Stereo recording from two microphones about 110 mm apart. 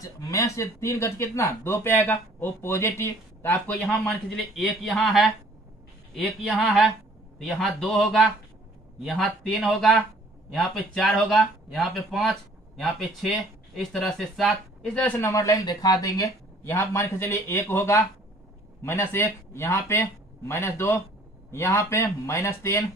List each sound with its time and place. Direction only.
0.0 s speech: 30° left (ahead or behind)
3.9 s speech: 5° left (ahead or behind)
7.4 s speech: centre (ahead or behind)
9.4 s speech: centre (ahead or behind)
15.0 s speech: 15° left (ahead or behind)
15.2 s speech: 30° left (ahead or behind)